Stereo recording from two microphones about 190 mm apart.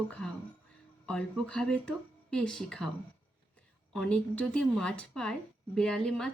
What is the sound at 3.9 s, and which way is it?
Speech, 5° left (ahead or behind).